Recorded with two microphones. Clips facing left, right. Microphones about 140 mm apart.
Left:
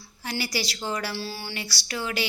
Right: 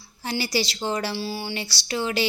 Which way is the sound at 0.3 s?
30° right (ahead or behind).